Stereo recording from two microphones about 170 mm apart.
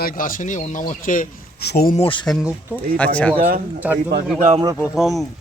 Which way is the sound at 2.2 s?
Centre (ahead or behind).